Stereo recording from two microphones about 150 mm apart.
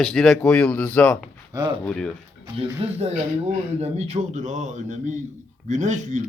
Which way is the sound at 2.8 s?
45° right (ahead or behind).